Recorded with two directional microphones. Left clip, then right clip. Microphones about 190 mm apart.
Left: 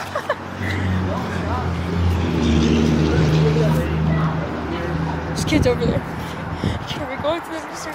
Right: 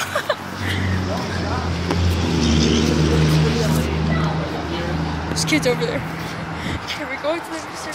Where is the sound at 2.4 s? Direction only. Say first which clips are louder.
Even; 15° left (ahead or behind).